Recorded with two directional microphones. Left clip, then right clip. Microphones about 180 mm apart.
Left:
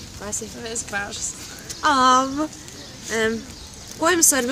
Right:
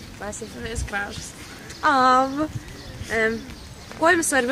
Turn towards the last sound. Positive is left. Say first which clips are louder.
# even
turn(degrees=55)  # may be behind; listen again after turning